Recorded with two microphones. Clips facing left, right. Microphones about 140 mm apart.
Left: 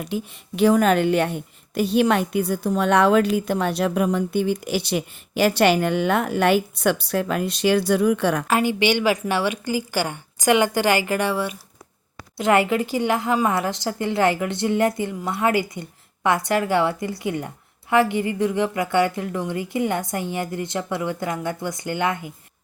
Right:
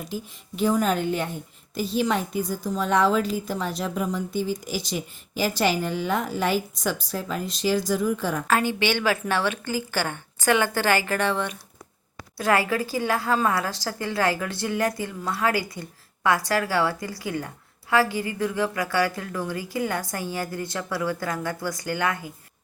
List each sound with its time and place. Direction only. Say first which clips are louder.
0.0 s a woman's voice: left 5 dB; 70° left (ahead or behind)
8.4 s a woman's voice: even; 15° left (ahead or behind)
12.4 s a woman's voice: left 4 dB; 20° left (ahead or behind)